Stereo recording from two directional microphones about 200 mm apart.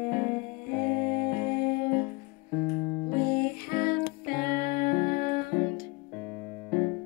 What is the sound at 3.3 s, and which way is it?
Music, 45° left (ahead or behind).